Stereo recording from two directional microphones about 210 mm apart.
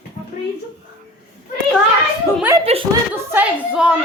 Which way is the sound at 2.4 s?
15° right (ahead or behind).